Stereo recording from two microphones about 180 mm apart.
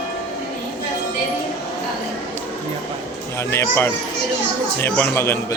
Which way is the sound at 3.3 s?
15° left (ahead or behind).